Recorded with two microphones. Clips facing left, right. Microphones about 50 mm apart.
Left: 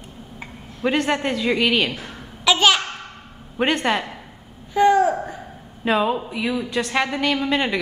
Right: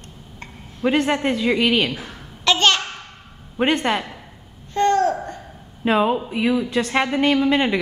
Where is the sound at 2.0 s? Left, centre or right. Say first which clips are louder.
Left 1 dB; centre.